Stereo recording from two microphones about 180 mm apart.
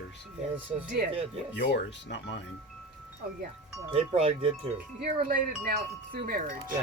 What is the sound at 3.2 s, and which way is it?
Speech, 55° right (ahead or behind).